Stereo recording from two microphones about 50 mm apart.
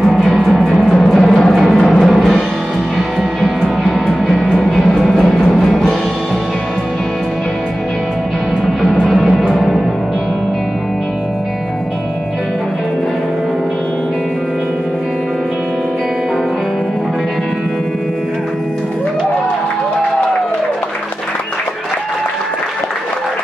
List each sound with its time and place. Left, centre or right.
0.0 s music: centre
5.2 s music: centre
9.1 s music: centre
9.4 s music: centre